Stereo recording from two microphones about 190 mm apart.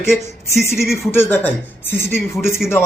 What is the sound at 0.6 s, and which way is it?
Speech, 15° left (ahead or behind).